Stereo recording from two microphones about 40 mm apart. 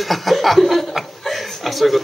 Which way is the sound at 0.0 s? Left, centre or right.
Centre.